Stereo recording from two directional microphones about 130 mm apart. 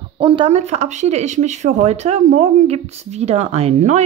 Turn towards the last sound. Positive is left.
turn(degrees=-60)  # may be behind; listen again after turning